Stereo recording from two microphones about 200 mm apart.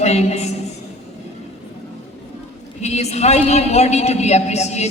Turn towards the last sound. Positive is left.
turn(degrees=35)  # may be behind; listen again after turning